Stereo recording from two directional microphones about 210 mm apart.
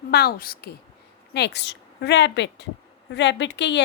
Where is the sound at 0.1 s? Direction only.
45° left (ahead or behind).